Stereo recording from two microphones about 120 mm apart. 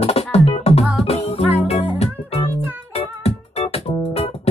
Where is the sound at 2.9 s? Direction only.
60° left (ahead or behind).